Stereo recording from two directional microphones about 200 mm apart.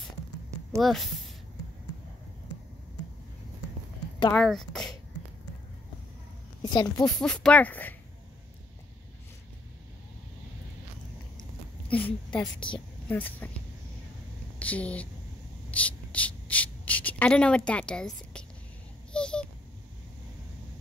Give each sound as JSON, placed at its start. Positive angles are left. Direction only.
{"t": 0.7, "sound": "speech", "side_deg": 0}
{"t": 4.3, "sound": "speech", "side_deg": 0}
{"t": 6.6, "sound": "speech", "side_deg": 20}
{"t": 7.2, "sound": "speech", "side_deg": 5}
{"t": 11.9, "sound": "speech", "side_deg": 5}
{"t": 12.5, "sound": "a woman's voice", "side_deg": 25}
{"t": 13.1, "sound": "speech", "side_deg": 10}
{"t": 14.6, "sound": "speech", "side_deg": 5}
{"t": 15.7, "sound": "a sound", "side_deg": 5}
{"t": 19.1, "sound": "babbling", "side_deg": 5}